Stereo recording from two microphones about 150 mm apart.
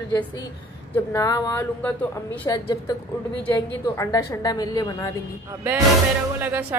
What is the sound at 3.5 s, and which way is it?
Speech, 20° left (ahead or behind).